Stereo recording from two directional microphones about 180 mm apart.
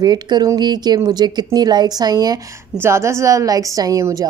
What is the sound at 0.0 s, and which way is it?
A woman's voice, 20° right (ahead or behind).